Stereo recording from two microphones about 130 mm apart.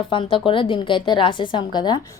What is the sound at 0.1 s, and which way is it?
A woman's voice, 40° left (ahead or behind).